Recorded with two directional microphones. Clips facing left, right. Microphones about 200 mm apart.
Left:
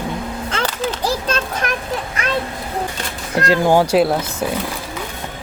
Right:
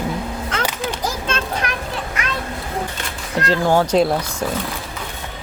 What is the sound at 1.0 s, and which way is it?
Children playing, 35° left (ahead or behind).